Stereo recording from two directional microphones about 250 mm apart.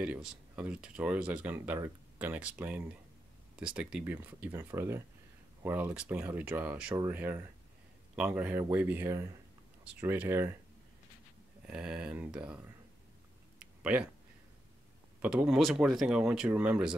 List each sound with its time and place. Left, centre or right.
0.0 s speech: centre
11.6 s speech: centre
13.6 s a sound: centre
15.2 s speech: centre